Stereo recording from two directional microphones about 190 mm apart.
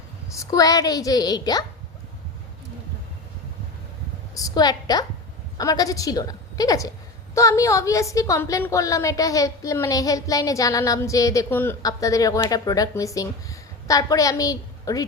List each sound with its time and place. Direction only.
0.3 s a woman's voice: 20° left (ahead or behind)
4.4 s a woman's voice: 20° left (ahead or behind)